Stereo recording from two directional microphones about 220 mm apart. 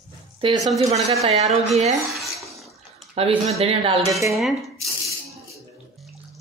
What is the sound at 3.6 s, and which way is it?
Speech, 25° right (ahead or behind).